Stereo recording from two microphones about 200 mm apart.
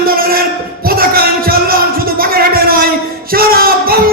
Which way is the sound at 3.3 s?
45° right (ahead or behind).